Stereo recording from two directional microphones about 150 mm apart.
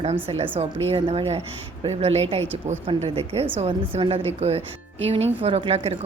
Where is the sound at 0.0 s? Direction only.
45° right (ahead or behind).